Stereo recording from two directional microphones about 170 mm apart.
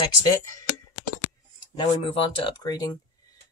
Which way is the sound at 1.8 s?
30° left (ahead or behind).